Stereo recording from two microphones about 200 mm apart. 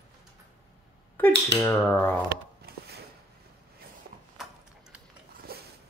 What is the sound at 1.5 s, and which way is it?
Speech, 5° left (ahead or behind).